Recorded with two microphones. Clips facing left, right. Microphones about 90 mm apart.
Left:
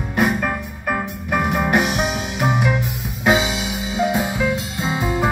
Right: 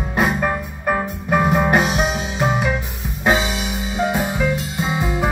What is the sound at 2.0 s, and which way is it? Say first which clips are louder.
Music: right 1 dB; 5° left (ahead or behind).